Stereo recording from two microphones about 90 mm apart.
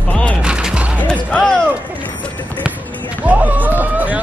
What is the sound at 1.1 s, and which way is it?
Music, 10° left (ahead or behind).